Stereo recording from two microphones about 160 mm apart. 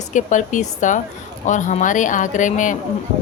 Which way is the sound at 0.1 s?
50° left (ahead or behind).